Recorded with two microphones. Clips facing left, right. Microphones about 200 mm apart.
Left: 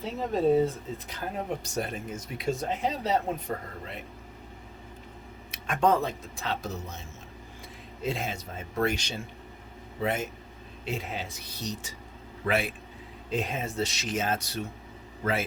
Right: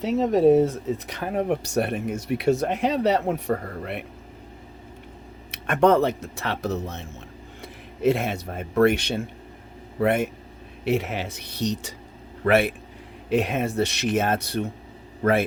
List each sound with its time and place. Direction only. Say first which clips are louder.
0.0 s speech: right 8 dB; 75° right (ahead or behind)
5.5 s speech: right 6 dB; 65° right (ahead or behind)
12.5 s speech: right 8 dB; 60° right (ahead or behind)
13.3 s a man's voice: right 8 dB; 70° right (ahead or behind)